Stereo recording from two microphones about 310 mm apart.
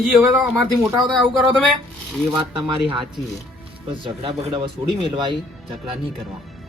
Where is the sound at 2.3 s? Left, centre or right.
Centre.